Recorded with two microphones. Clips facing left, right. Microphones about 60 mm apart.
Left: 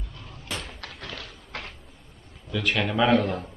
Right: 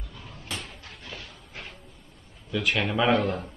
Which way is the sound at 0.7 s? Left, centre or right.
Left.